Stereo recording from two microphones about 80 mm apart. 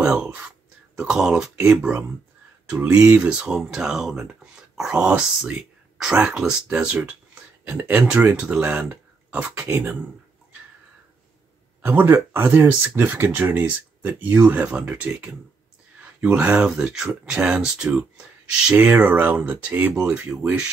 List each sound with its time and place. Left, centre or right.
0.0 s speech: centre
11.8 s speech: right; by 17.1 s centre
17.1 s speech: centre
18.9 s speech: centre